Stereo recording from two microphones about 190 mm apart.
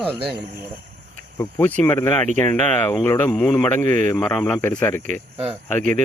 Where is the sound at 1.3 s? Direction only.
10° left (ahead or behind).